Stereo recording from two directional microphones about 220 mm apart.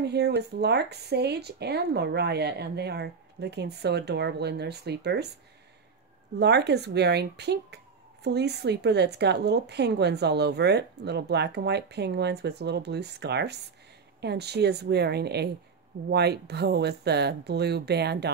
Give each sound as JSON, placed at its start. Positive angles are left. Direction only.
{"t": 0.0, "sound": "speech", "side_deg": -50}
{"t": 6.4, "sound": "speech", "side_deg": -50}